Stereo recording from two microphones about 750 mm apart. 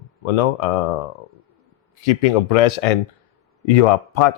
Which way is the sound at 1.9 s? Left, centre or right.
Left.